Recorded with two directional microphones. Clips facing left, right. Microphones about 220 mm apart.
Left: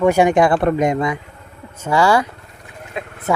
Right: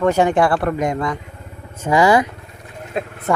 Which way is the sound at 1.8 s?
15° right (ahead or behind).